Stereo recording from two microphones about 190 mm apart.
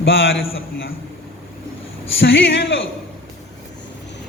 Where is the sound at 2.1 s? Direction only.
80° left.